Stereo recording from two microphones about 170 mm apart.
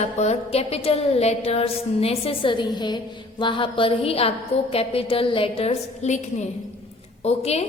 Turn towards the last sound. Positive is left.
turn(degrees=40)  # may be behind; listen again after turning